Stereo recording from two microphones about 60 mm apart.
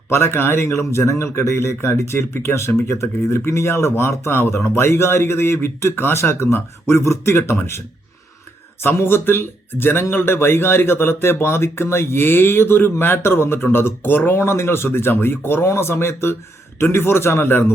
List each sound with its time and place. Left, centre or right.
0.1 s speech: left
8.8 s speech: left